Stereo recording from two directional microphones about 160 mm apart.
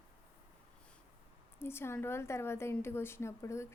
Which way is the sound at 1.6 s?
15° left (ahead or behind).